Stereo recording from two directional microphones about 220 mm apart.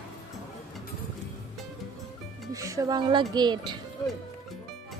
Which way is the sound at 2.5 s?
15° right (ahead or behind).